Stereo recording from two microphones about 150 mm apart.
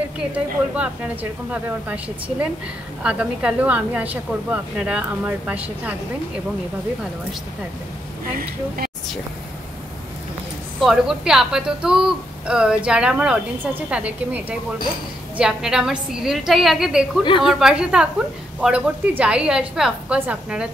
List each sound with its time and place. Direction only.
1.5 s a woman's voice: 10° right (ahead or behind)
8.4 s speech: 75° right (ahead or behind)
10.8 s a woman's voice: centre (ahead or behind)